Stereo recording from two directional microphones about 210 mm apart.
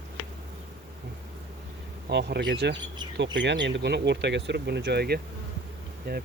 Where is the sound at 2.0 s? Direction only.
55° right (ahead or behind).